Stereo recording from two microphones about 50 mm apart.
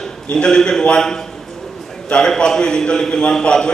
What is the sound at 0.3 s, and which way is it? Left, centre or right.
A man's voice, centre.